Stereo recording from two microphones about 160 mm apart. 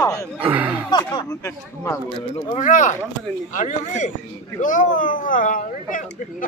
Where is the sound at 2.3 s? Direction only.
55° left (ahead or behind).